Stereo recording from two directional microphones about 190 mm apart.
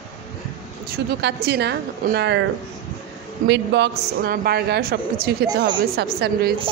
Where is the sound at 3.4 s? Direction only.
65° right (ahead or behind).